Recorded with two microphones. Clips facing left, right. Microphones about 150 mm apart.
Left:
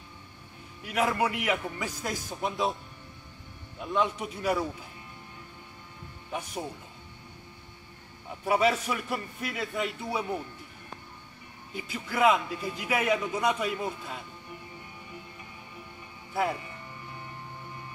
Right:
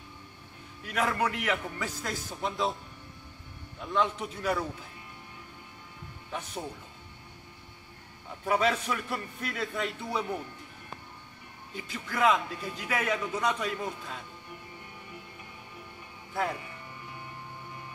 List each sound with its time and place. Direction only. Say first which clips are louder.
0.8 s a man's voice: left 2 dB; 10° left (ahead or behind)
3.8 s a man's voice: left 1 dB; 10° left (ahead or behind)
6.3 s a man's voice: left 2 dB; 10° left (ahead or behind)
8.5 s a man's voice: left 2 dB; 10° left (ahead or behind)
11.7 s a man's voice: left 3 dB; 10° left (ahead or behind)
16.3 s a man's voice: left 3 dB; 10° left (ahead or behind)